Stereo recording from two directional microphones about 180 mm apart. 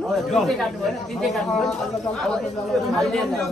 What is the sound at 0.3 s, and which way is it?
Speech, centre (ahead or behind).